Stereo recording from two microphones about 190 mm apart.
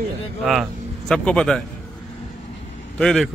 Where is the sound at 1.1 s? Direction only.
5° left (ahead or behind).